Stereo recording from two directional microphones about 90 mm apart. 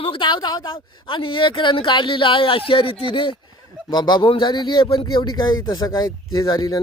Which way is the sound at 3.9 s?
55° left (ahead or behind).